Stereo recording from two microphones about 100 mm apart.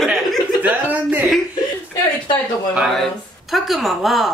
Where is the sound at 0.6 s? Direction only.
15° right (ahead or behind).